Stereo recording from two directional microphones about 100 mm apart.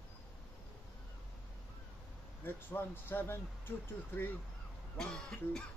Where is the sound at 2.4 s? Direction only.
20° left (ahead or behind).